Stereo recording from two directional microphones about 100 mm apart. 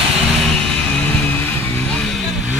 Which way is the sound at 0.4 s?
5° left (ahead or behind).